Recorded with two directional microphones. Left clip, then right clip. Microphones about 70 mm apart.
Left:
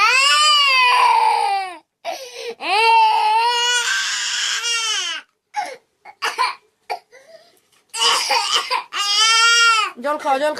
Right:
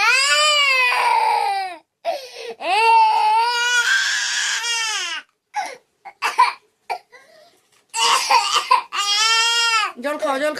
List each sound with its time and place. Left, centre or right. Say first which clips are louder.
0.0 s baby cry: left 2 dB; right; by 3.2 s centre
3.2 s baby cry: even; centre
3.4 s baby cry: even; right
5.5 s cough: left 1 dB; right
7.9 s crying: right 1 dB; right
10.0 s speech: left 2 dB; right